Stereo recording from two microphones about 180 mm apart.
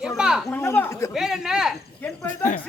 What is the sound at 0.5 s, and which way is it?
Speech, 10° left (ahead or behind).